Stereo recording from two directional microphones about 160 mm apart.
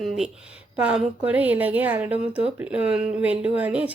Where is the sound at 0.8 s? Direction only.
5° right (ahead or behind).